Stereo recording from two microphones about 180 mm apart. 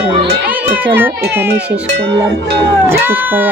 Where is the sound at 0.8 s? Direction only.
10° right (ahead or behind).